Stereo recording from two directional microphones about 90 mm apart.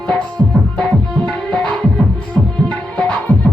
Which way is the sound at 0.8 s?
10° left (ahead or behind).